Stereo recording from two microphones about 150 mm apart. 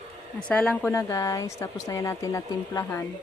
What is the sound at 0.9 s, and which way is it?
Speech, 20° left (ahead or behind).